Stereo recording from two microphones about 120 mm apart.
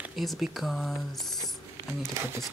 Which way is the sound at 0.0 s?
Centre (ahead or behind).